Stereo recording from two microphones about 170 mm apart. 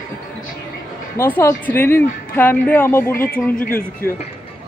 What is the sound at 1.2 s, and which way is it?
A woman's voice, 15° left (ahead or behind).